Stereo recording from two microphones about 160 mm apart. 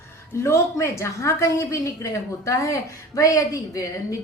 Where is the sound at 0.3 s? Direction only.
15° left (ahead or behind).